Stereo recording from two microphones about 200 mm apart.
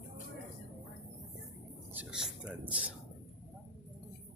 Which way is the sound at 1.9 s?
5° right (ahead or behind).